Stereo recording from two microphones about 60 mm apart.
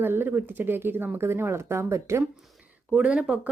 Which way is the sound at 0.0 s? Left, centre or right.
Right.